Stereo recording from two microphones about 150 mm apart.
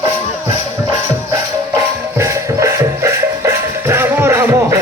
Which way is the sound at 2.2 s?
20° right (ahead or behind).